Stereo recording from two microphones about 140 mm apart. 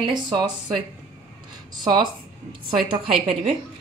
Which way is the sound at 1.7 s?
35° right (ahead or behind).